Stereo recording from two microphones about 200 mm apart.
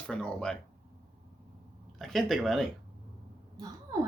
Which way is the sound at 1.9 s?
Centre (ahead or behind).